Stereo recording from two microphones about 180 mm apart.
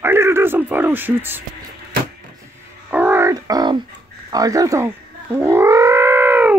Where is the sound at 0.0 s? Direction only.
15° right (ahead or behind).